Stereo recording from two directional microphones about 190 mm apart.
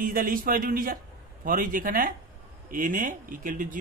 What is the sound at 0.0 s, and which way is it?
A man's voice, 45° right (ahead or behind).